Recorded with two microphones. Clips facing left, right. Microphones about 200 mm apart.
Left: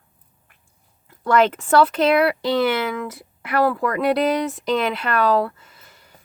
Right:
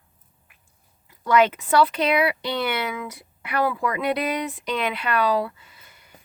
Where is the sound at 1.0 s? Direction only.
50° left (ahead or behind).